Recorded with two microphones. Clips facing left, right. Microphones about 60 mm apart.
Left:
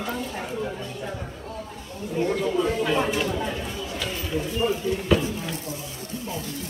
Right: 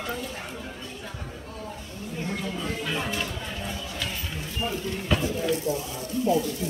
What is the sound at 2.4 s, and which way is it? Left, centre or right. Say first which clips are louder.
Speech: left 8 dB; centre.